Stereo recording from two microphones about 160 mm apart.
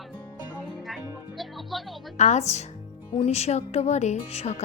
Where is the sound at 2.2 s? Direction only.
45° left (ahead or behind).